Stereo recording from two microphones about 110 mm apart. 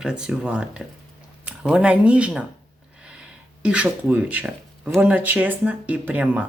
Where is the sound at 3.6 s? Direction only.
10° right (ahead or behind).